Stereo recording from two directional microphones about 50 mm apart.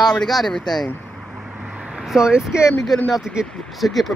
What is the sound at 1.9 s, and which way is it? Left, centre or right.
Speech, centre.